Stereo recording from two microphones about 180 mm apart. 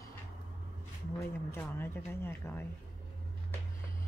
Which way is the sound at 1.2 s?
15° left (ahead or behind).